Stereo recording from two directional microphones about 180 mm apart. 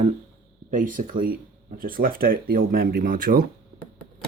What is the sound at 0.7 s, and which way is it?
Speech, 45° right (ahead or behind).